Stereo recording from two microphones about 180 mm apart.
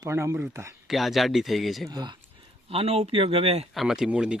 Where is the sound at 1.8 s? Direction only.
25° right (ahead or behind).